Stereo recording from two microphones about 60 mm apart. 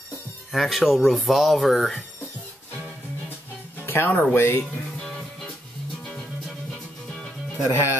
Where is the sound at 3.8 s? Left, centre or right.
Left.